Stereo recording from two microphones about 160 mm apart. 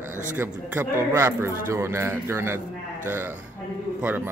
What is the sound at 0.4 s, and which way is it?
Speech, 15° right (ahead or behind).